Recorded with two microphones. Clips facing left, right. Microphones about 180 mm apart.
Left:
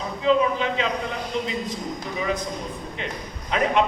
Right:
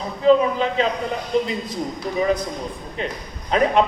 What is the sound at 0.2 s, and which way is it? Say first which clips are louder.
A man's voice: right 5 dB; 40° right (ahead or behind).